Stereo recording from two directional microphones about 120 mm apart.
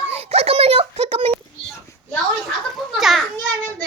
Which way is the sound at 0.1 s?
60° right (ahead or behind).